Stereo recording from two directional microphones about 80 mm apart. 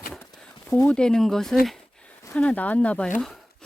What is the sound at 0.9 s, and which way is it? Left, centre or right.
Speech, centre.